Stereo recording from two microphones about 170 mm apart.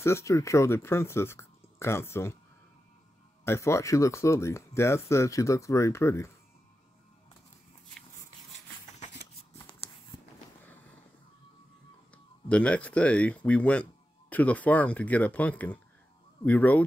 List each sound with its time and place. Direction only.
0.0 s speech: 15° left (ahead or behind)
3.4 s speech: 15° left (ahead or behind)
12.4 s speech: 5° left (ahead or behind)